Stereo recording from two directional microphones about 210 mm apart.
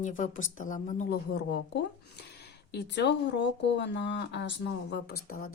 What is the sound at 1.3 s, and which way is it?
Speech, 50° left (ahead or behind).